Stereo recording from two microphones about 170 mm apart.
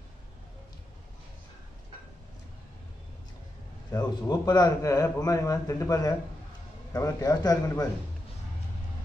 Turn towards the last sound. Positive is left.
turn(degrees=20)  # may be behind; listen again after turning